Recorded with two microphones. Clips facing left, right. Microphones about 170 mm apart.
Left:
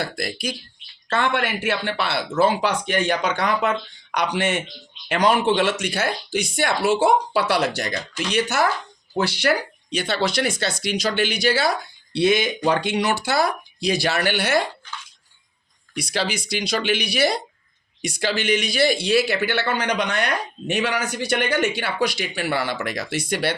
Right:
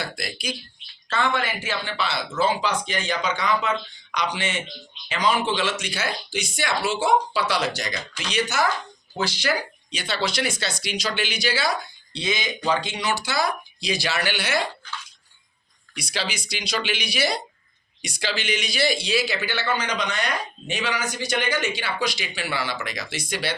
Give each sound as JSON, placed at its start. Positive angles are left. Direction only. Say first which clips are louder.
{"t": 0.0, "sound": "speech", "louder": "left 5 dB", "side_deg": 55}
{"t": 1.1, "sound": "speech", "louder": "left 2 dB", "side_deg": 65}
{"t": 16.0, "sound": "speech", "louder": "left 5 dB", "side_deg": 55}